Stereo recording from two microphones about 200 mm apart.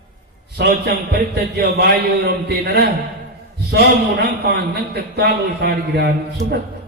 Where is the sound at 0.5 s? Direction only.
55° right (ahead or behind).